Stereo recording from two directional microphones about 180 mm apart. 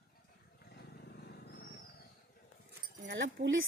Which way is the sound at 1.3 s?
65° left (ahead or behind).